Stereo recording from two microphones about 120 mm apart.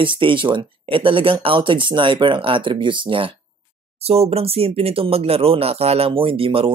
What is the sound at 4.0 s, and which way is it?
Speech, 55° right (ahead or behind).